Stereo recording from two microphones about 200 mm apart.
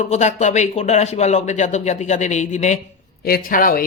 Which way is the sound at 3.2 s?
50° left (ahead or behind).